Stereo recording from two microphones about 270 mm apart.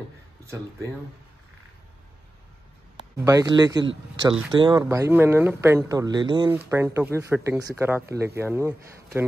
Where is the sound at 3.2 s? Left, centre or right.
Centre.